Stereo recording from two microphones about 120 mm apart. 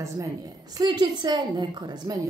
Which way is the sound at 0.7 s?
35° right (ahead or behind).